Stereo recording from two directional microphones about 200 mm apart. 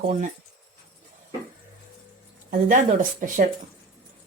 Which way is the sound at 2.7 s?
40° right (ahead or behind).